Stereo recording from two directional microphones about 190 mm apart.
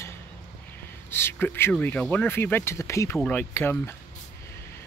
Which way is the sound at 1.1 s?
10° left (ahead or behind).